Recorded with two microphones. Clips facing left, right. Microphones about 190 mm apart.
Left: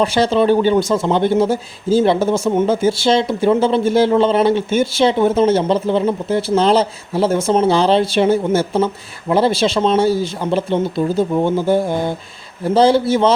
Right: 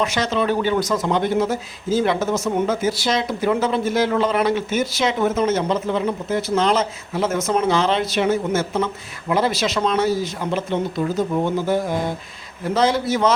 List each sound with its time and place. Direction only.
0.0 s speech: 30° left (ahead or behind)